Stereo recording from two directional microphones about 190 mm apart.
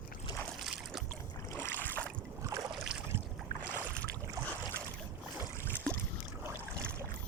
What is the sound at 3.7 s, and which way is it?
Boat, 10° left (ahead or behind).